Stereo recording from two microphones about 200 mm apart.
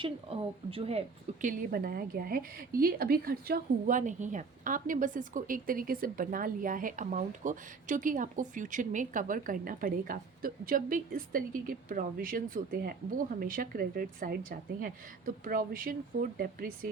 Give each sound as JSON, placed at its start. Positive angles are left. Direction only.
{"t": 0.0, "sound": "speech", "side_deg": -25}